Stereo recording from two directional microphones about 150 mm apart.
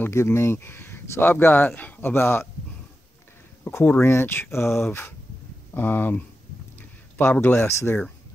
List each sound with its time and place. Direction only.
0.0 s speech: 15° left (ahead or behind)
3.6 s speech: 15° left (ahead or behind)